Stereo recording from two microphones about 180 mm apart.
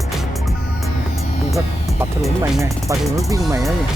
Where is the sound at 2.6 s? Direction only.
15° right (ahead or behind).